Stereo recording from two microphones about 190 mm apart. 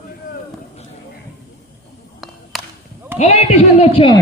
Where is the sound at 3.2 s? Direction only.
35° left (ahead or behind).